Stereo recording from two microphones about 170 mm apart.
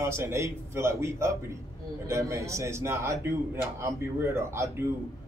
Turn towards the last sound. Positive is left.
turn(degrees=-15)  # may be behind; listen again after turning